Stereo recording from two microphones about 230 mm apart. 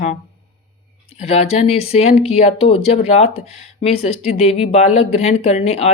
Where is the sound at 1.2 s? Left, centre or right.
Left.